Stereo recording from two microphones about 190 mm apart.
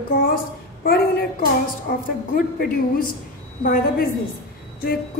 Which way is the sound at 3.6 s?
50° left (ahead or behind).